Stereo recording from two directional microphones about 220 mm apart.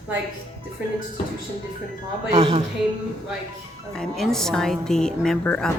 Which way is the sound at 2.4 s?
20° right (ahead or behind).